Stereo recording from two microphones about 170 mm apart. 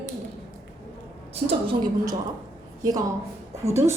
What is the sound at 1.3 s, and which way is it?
Speech, 35° right (ahead or behind).